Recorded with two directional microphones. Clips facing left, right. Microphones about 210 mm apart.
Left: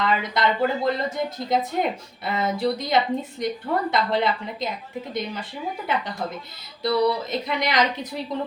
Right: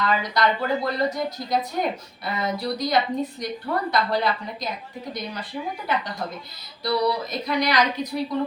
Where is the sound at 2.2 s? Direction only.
25° left (ahead or behind).